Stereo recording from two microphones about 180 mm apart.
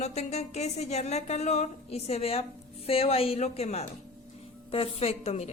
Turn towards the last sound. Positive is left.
turn(degrees=35)  # may be behind; listen again after turning